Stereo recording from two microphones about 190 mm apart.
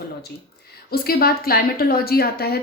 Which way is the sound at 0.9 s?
55° left (ahead or behind).